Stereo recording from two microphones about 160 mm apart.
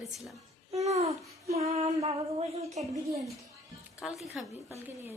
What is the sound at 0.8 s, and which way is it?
Child singing, 40° right (ahead or behind).